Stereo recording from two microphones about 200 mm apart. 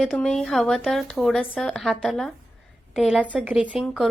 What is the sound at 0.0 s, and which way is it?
A woman's voice, centre (ahead or behind).